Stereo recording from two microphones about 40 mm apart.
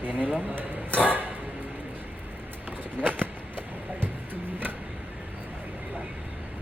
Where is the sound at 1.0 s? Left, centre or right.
Right.